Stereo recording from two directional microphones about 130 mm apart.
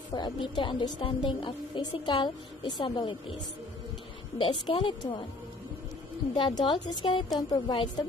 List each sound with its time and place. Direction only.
0.1 s a woman's voice: 35° left (ahead or behind)
4.4 s a woman's voice: 40° left (ahead or behind)
6.3 s a woman's voice: 40° left (ahead or behind)